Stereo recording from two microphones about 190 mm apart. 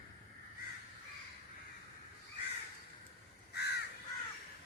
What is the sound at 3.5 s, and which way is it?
Crow, 60° left (ahead or behind).